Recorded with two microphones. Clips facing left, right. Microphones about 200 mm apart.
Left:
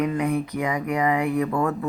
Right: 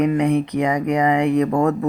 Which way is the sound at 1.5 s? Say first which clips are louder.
Right 6 dB; 40° right (ahead or behind).